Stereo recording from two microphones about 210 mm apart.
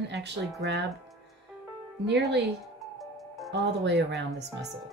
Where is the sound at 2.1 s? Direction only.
50° right (ahead or behind).